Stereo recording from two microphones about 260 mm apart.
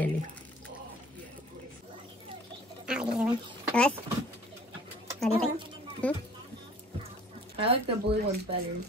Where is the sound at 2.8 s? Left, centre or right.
Centre.